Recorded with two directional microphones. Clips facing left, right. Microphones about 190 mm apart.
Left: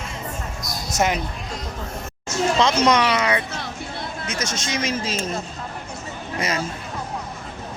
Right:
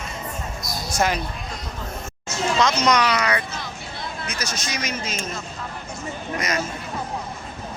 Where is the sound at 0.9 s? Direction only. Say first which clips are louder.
Left 1 dB; 20° left (ahead or behind).